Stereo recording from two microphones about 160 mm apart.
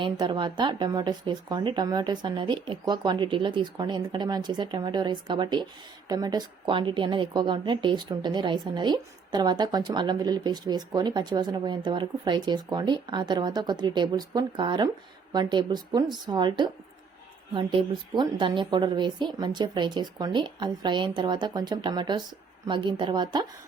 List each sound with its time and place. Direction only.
0.0 s a woman's voice: 30° right (ahead or behind)